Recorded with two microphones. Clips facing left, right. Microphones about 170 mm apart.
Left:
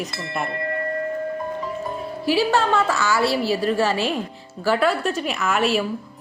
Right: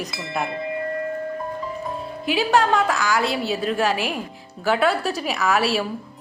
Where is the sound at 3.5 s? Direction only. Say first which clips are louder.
Left 3 dB; centre (ahead or behind).